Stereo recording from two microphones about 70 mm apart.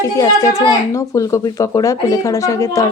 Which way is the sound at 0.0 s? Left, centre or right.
Left.